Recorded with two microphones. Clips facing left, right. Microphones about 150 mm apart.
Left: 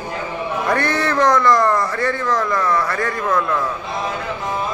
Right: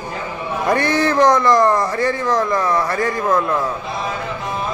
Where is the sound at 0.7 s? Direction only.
20° right (ahead or behind).